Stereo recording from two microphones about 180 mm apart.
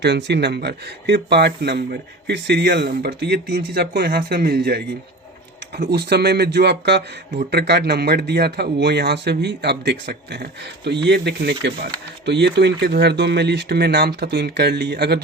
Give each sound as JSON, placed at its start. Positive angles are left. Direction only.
{"t": 0.0, "sound": "speech", "side_deg": -70}